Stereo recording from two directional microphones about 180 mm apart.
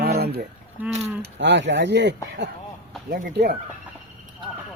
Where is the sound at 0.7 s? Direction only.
10° right (ahead or behind).